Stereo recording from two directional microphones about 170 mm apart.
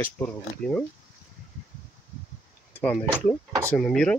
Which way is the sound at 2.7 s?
10° left (ahead or behind).